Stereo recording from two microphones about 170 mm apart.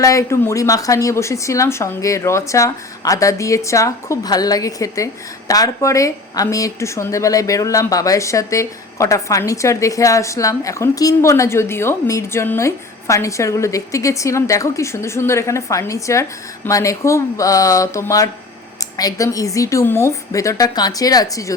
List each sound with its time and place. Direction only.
0.0 s a woman's voice: 20° left (ahead or behind)